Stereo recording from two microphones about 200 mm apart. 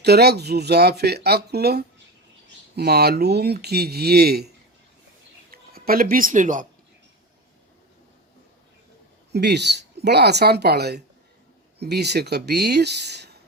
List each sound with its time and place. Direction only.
0.0 s speech: 55° right (ahead or behind)
9.3 s speech: 55° right (ahead or behind)